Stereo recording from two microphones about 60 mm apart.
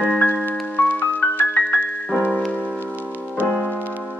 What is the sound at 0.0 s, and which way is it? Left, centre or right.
Music, left.